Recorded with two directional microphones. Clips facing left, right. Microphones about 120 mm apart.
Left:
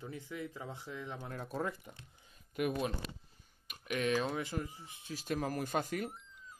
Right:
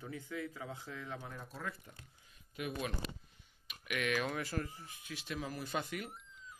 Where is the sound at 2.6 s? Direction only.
50° left (ahead or behind).